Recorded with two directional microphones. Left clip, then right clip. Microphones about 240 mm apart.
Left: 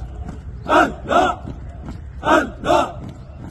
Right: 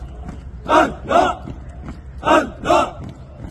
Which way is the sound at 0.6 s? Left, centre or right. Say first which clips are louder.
Right 1 dB; centre.